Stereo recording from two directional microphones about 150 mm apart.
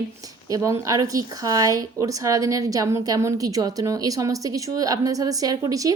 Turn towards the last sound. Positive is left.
turn(degrees=-25)  # may be behind; listen again after turning